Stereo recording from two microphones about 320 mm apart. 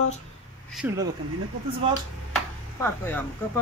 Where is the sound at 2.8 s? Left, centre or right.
Centre.